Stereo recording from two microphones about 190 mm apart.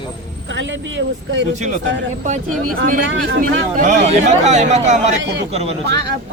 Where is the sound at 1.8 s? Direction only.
75° right (ahead or behind).